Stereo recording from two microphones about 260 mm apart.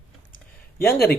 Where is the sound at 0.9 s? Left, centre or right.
Left.